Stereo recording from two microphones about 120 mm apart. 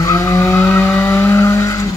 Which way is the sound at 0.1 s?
20° left (ahead or behind).